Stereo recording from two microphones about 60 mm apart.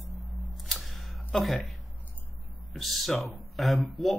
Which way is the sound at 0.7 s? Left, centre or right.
Centre.